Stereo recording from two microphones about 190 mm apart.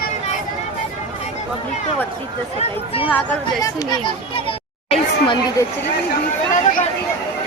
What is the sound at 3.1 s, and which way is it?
Speech, 15° left (ahead or behind).